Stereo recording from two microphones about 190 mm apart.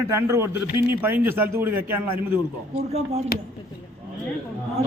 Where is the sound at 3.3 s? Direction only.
55° left (ahead or behind).